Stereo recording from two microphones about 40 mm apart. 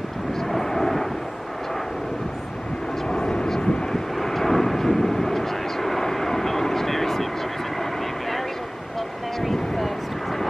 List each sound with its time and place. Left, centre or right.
0.5 s vehicle: centre
3.1 s aircraft: centre
3.9 s vehicle: centre
9.4 s a sound: centre